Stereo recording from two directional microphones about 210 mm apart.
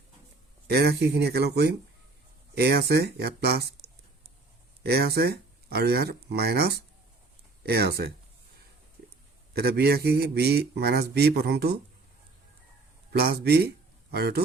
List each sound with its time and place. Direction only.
0.7 s a man's voice: 50° right (ahead or behind)
4.8 s a man's voice: 50° right (ahead or behind)
9.5 s a man's voice: 50° right (ahead or behind)
13.1 s speech: 45° right (ahead or behind)